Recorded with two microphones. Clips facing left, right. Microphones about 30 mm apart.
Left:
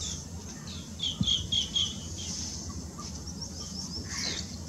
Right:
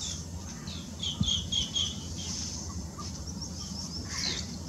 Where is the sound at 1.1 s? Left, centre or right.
Centre.